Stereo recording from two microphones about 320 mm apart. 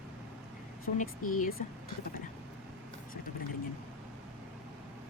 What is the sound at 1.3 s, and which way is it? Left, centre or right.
Speech, left.